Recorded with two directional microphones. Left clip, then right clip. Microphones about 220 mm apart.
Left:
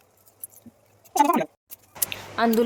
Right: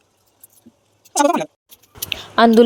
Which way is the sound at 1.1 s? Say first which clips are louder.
Right 4 dB; 30° right (ahead or behind).